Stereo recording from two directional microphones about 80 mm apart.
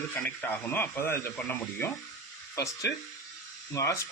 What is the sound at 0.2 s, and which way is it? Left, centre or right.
Speech, left.